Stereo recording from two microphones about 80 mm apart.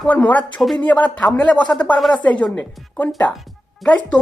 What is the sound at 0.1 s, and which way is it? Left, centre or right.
Speech, centre.